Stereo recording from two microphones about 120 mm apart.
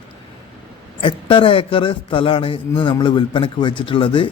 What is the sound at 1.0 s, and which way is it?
A man's voice, 45° left (ahead or behind).